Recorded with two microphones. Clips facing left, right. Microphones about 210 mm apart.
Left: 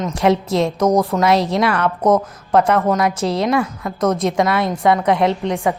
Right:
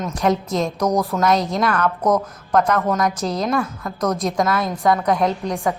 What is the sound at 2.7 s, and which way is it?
A woman's voice, 5° left (ahead or behind).